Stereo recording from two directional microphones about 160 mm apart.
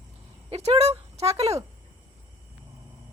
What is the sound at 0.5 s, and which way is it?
Speech, 40° right (ahead or behind).